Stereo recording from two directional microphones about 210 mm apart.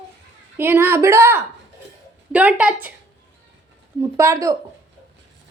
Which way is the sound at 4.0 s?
15° right (ahead or behind).